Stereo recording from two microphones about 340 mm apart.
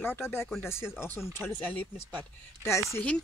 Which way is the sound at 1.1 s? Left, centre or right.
Centre.